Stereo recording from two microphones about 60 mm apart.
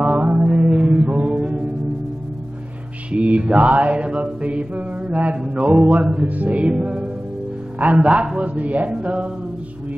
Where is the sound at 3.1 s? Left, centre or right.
Right.